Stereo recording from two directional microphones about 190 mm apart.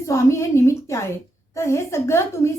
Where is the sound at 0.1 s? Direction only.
15° left (ahead or behind).